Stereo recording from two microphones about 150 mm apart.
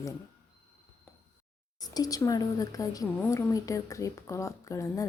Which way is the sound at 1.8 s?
25° left (ahead or behind).